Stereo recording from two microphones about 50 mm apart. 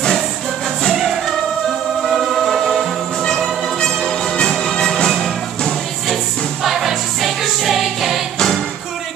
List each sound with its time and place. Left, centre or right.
0.9 s music: centre
6.6 s music: centre